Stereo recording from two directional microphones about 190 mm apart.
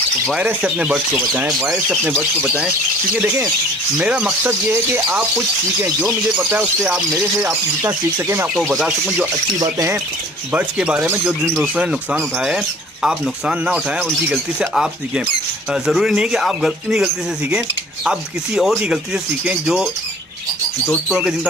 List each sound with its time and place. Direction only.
0.3 s speech: 5° right (ahead or behind)
4.0 s speech: 5° right (ahead or behind)
8.5 s speech: 5° right (ahead or behind)
9.6 s speech: 20° right (ahead or behind)
10.5 s speech: 5° right (ahead or behind)
21.1 s speech: 5° right (ahead or behind)